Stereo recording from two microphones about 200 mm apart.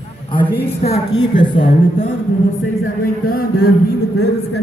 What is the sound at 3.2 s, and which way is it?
Speech, 45° left (ahead or behind).